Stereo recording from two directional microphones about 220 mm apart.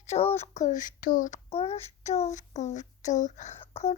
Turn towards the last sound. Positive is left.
turn(degrees=25)  # may be behind; listen again after turning